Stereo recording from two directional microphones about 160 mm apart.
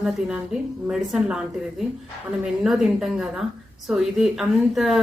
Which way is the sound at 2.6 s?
5° right (ahead or behind).